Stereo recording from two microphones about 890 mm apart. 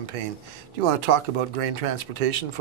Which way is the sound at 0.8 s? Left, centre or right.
Right.